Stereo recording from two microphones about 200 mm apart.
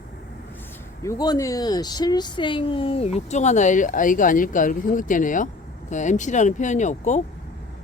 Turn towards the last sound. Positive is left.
turn(degrees=35)  # may be behind; listen again after turning